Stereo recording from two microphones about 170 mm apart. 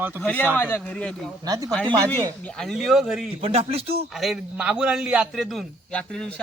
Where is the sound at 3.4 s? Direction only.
35° right (ahead or behind).